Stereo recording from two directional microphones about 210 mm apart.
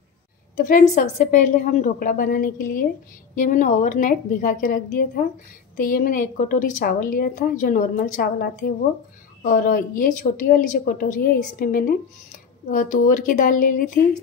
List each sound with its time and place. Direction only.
0.6 s a woman's voice: 40° left (ahead or behind)